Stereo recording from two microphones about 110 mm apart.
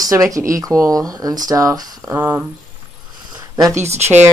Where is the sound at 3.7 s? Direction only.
90° right.